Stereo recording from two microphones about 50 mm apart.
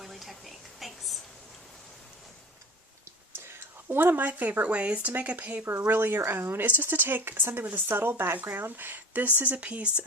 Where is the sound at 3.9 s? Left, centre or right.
Right.